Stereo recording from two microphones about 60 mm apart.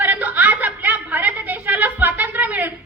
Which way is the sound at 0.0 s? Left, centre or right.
Right.